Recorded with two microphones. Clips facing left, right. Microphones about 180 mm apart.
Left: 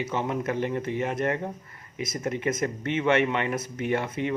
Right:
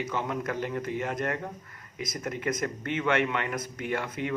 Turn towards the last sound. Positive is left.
turn(degrees=25)  # may be behind; listen again after turning